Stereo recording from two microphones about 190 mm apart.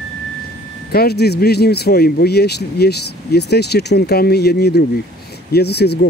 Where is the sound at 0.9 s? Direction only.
55° left (ahead or behind).